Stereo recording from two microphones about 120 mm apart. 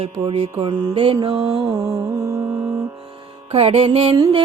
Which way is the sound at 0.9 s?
45° right (ahead or behind).